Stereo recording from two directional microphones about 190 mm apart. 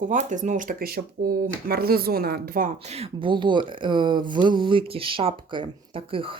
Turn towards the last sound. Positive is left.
turn(degrees=-30)  # may be behind; listen again after turning